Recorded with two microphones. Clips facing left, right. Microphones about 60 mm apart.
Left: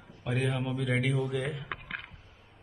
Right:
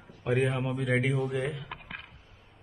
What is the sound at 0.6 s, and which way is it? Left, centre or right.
A man's voice, centre.